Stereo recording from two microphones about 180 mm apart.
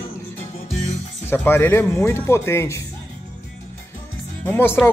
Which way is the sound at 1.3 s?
10° left (ahead or behind).